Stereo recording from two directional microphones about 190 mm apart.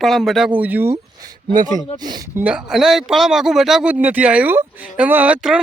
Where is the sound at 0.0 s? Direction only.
Centre (ahead or behind).